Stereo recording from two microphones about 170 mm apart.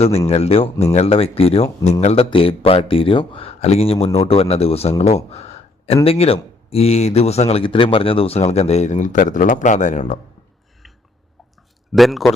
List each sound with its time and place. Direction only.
0.3 s speech: 35° left (ahead or behind)
11.9 s a man's voice: centre (ahead or behind)